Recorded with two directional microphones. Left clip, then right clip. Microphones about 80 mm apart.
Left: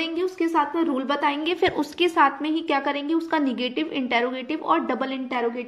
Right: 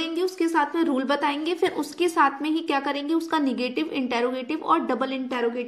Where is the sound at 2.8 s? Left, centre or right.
Right.